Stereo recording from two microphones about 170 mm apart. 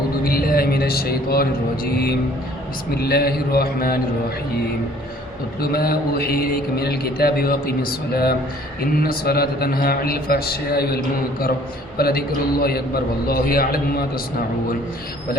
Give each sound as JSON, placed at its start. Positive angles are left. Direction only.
{"t": 0.3, "sound": "speech", "side_deg": 60}
{"t": 5.5, "sound": "speech", "side_deg": 65}